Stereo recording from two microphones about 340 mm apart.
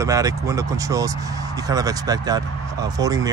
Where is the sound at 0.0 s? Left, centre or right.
Centre.